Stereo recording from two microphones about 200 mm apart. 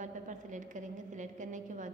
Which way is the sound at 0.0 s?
40° right (ahead or behind).